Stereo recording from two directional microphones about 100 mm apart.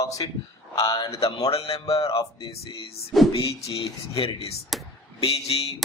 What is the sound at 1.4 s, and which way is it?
Music, 80° left.